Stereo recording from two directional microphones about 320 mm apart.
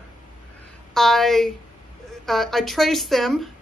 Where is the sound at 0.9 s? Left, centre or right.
Centre.